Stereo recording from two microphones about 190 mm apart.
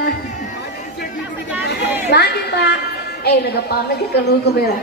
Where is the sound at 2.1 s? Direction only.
60° left (ahead or behind).